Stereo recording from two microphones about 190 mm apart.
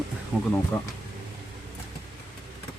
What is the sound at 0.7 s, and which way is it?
Speech, 10° left (ahead or behind).